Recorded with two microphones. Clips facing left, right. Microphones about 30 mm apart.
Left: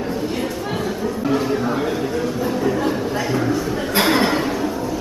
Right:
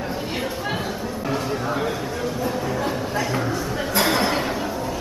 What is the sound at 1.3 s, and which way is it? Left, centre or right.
Speech, centre.